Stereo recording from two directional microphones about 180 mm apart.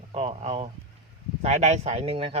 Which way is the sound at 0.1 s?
35° right (ahead or behind).